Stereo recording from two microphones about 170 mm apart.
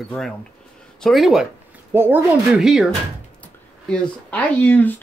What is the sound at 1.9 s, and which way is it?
Speech, 15° right (ahead or behind).